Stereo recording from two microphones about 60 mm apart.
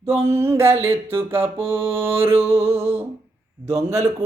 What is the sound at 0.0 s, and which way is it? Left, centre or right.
Music, right.